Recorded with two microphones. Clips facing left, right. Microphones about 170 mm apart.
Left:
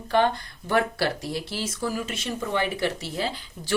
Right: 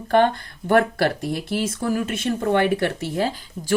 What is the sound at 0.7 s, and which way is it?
Speech, 55° right (ahead or behind).